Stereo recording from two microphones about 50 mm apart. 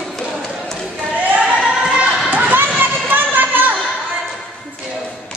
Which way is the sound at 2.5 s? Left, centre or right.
Right.